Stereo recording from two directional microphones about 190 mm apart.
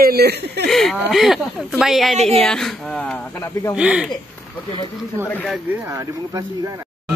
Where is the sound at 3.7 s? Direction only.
5° right (ahead or behind).